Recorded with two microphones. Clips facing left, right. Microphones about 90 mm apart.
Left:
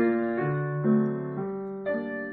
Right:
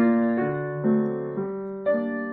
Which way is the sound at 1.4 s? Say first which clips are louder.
Right 4 dB; 35° right (ahead or behind).